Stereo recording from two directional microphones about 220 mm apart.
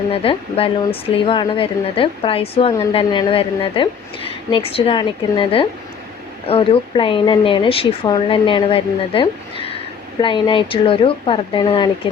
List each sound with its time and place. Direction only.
0.1 s a woman's voice: 25° left (ahead or behind)